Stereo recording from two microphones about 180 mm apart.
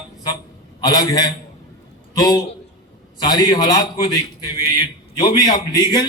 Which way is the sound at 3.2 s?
20° left (ahead or behind).